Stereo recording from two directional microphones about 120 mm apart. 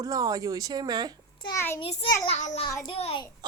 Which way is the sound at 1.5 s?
20° left (ahead or behind).